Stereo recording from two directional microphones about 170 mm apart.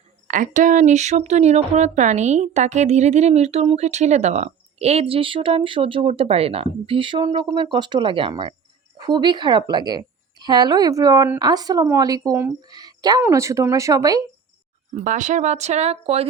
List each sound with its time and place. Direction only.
0.3 s a woman's voice: 50° right (ahead or behind); by 14.2 s 20° right (ahead or behind)
15.0 s speech: 45° right (ahead or behind)